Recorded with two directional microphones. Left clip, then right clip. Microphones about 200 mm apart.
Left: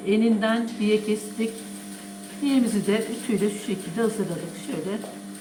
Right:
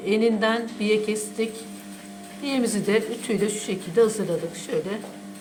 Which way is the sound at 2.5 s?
50° right (ahead or behind).